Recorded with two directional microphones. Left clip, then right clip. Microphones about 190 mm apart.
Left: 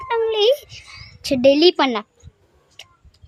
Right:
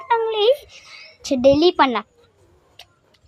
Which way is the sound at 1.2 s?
10° left (ahead or behind).